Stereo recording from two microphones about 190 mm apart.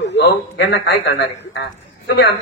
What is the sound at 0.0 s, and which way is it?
A man's voice, 65° left (ahead or behind).